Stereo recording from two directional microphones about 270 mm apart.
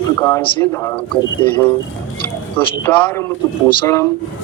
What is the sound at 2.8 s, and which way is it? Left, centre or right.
Speech, centre.